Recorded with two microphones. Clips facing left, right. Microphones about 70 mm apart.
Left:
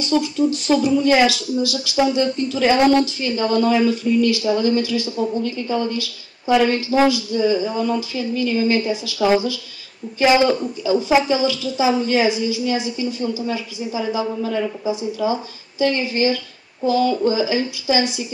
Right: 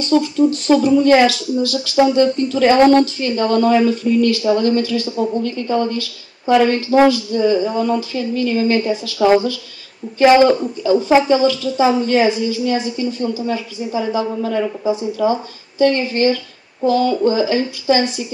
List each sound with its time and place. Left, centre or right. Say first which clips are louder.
0.2 s a woman's voice: right 4 dB; centre
10.4 s a man's voice: right 5 dB; centre
10.9 s a woman's voice: right 4 dB; centre